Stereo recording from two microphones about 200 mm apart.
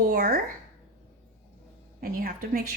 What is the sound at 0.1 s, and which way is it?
Speech, 50° right (ahead or behind).